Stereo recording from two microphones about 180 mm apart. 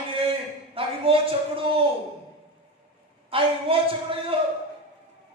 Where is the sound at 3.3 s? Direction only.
30° right (ahead or behind).